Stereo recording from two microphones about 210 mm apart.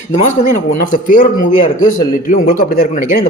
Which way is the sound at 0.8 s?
40° left (ahead or behind).